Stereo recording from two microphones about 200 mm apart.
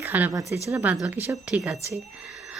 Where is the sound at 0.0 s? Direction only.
10° right (ahead or behind).